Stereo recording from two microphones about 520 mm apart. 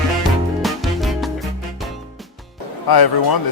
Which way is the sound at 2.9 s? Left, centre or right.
Left.